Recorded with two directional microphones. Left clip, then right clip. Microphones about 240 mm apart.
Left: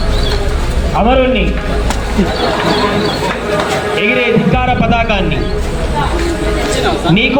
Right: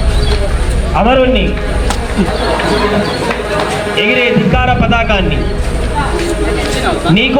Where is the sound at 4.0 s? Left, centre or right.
Right.